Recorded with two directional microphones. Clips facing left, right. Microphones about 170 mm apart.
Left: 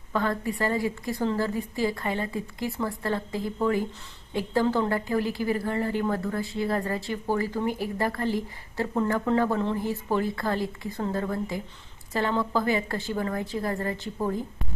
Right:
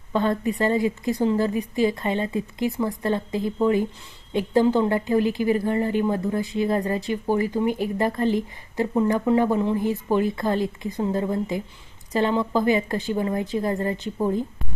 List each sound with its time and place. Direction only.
0.1 s a woman's voice: 20° right (ahead or behind)